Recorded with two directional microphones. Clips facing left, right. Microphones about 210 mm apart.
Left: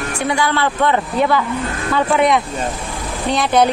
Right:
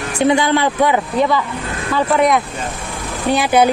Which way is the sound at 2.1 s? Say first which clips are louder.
Right 1 dB; centre (ahead or behind).